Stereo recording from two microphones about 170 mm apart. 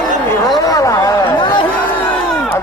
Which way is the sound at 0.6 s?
20° left (ahead or behind).